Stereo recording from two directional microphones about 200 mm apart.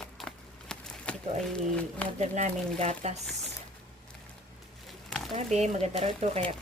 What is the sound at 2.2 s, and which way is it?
Speech, 35° right (ahead or behind).